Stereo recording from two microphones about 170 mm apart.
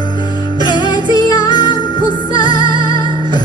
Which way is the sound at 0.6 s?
25° left (ahead or behind).